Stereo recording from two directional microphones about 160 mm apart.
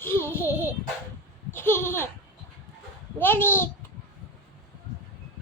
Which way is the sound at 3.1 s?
10° left (ahead or behind).